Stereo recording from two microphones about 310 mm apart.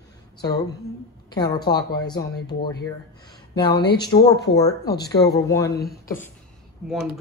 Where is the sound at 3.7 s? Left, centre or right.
Left.